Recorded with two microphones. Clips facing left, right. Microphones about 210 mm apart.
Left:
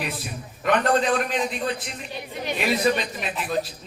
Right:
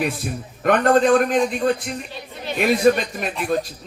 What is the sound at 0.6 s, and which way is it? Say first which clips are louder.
A man's voice: right 5 dB; 50° right (ahead or behind).